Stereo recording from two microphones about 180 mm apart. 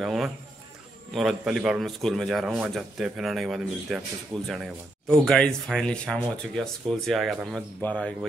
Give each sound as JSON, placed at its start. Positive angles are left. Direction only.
{"t": 0.0, "sound": "a man's voice", "side_deg": 0}